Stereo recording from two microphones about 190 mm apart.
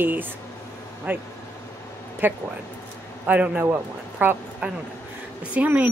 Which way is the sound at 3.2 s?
10° right (ahead or behind).